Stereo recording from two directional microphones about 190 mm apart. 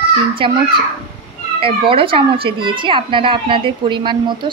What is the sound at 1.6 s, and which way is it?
A child's voice, 30° right (ahead or behind).